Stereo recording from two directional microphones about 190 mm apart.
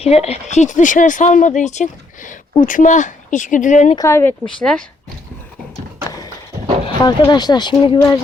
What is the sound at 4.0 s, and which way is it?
Speech, 15° left (ahead or behind).